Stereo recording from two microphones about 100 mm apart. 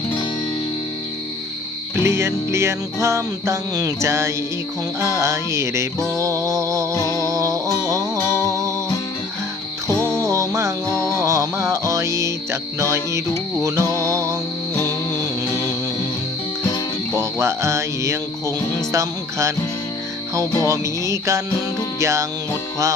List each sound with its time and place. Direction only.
2.0 s music: 25° right (ahead or behind)
10.2 s music: 35° right (ahead or behind)
17.2 s speech: 25° right (ahead or behind)
20.7 s music: 30° right (ahead or behind)